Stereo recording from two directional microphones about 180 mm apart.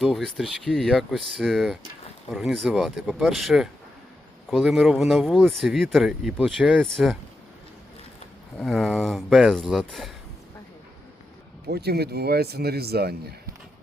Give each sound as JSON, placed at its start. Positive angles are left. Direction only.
{"t": 0.0, "sound": "speech", "side_deg": 0}
{"t": 8.5, "sound": "speech", "side_deg": 0}
{"t": 11.7, "sound": "speech", "side_deg": -65}